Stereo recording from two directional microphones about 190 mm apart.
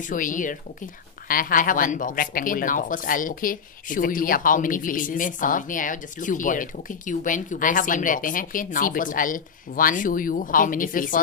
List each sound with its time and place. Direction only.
0.1 s speech: 45° left (ahead or behind)